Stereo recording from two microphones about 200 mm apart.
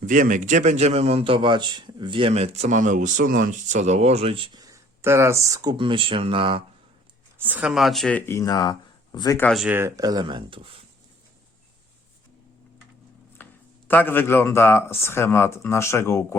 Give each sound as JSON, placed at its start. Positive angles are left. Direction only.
{"t": 0.0, "sound": "a man's voice", "side_deg": -40}
{"t": 7.4, "sound": "speech", "side_deg": -5}
{"t": 9.5, "sound": "speech", "side_deg": -5}
{"t": 13.4, "sound": "speech", "side_deg": 10}